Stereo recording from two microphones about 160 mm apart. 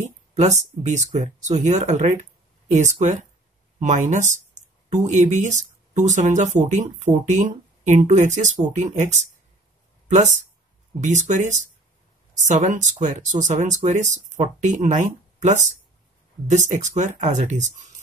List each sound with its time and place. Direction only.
0.0 s speech: 45° right (ahead or behind)